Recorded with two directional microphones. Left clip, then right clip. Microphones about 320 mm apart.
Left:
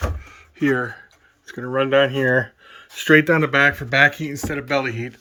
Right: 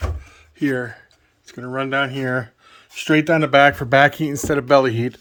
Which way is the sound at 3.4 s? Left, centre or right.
Centre.